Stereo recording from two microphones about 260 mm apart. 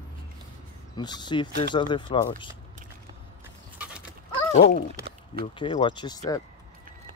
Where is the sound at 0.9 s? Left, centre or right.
Centre.